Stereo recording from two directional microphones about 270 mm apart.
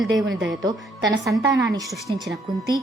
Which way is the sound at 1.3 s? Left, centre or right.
Centre.